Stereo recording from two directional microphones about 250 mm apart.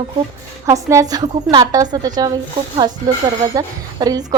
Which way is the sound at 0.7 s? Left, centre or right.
Centre.